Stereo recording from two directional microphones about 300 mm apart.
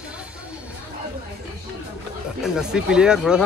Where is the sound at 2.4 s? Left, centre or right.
Centre.